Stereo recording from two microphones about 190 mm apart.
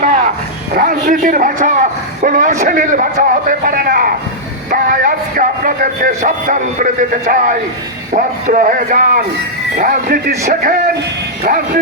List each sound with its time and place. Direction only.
0.7 s speech: 45° right (ahead or behind)